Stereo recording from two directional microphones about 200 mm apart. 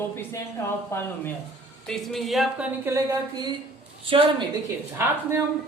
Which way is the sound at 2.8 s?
15° right (ahead or behind).